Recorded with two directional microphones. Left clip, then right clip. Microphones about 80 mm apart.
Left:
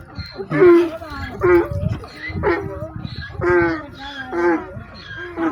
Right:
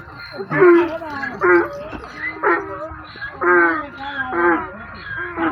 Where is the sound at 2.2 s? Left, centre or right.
Centre.